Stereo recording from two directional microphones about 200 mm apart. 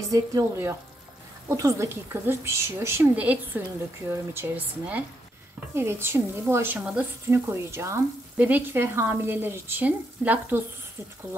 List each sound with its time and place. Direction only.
0.1 s speech: 15° right (ahead or behind)